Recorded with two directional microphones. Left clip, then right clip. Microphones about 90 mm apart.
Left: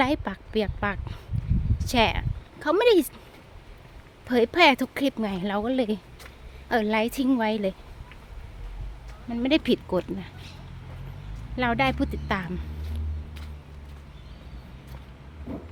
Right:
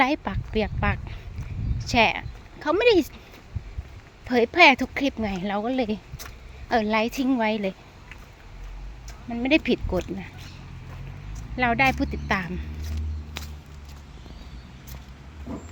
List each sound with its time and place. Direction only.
0.0 s speech: 25° left (ahead or behind)
4.3 s speech: 25° left (ahead or behind)
9.3 s speech: 30° left (ahead or behind)
11.5 s speech: 25° left (ahead or behind)